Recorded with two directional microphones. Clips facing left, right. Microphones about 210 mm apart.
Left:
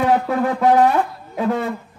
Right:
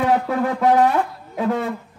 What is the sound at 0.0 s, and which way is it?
Shofar, 45° left (ahead or behind).